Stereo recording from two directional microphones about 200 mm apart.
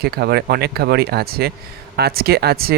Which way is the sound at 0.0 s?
55° right (ahead or behind).